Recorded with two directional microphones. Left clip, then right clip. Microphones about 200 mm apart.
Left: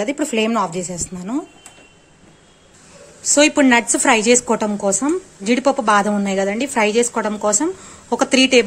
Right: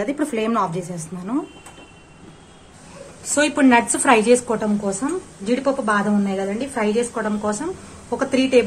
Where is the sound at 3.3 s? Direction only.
30° left (ahead or behind).